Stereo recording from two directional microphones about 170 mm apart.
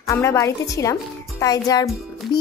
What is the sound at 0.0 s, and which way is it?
Speech, 15° left (ahead or behind).